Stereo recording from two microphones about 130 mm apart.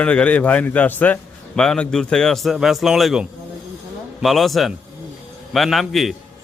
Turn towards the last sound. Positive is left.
turn(degrees=0)  # may be behind; listen again after turning